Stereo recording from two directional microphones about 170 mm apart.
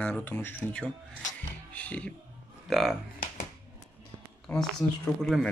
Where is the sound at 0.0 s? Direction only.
10° left (ahead or behind).